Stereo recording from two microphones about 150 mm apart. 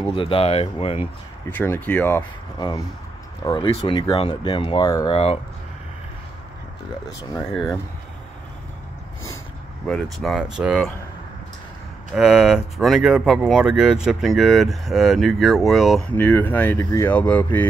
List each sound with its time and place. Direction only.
0.0 s speech: 35° left (ahead or behind)
1.5 s speech: 15° left (ahead or behind)
3.4 s speech: 35° left (ahead or behind)
5.1 s speech: 40° left (ahead or behind)
10.1 s speech: centre (ahead or behind)
12.1 s speech: 5° right (ahead or behind)